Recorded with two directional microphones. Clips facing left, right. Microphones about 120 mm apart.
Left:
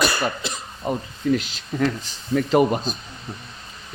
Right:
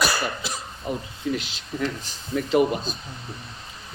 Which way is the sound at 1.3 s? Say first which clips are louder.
Left 5 dB; 45° left (ahead or behind).